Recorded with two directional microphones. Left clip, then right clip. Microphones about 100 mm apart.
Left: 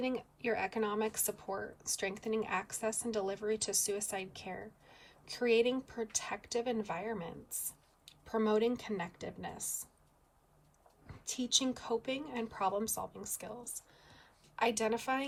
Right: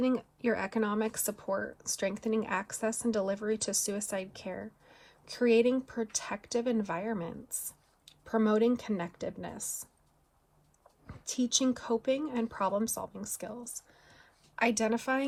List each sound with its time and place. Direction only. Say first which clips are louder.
0.0 s speech: right 6 dB; 5° right (ahead or behind)
11.3 s speech: right 3 dB; 5° right (ahead or behind)
14.1 s a sound: right 2 dB; 20° left (ahead or behind)
14.6 s speech: right 3 dB; 5° left (ahead or behind)